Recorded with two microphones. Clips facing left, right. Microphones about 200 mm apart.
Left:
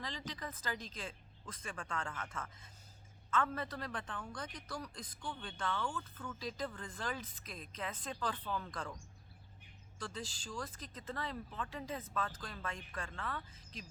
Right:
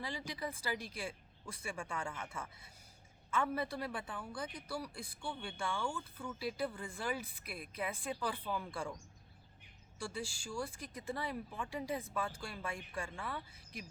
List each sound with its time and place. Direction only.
0.0 s a man's voice: 10° right (ahead or behind)
10.0 s a man's voice: 10° right (ahead or behind)